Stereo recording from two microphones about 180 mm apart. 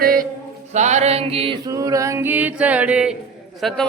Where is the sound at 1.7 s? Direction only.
15° right (ahead or behind).